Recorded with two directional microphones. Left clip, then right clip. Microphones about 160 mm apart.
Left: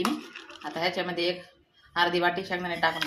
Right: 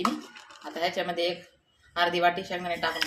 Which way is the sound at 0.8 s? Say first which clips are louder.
Right 1 dB; 35° left (ahead or behind).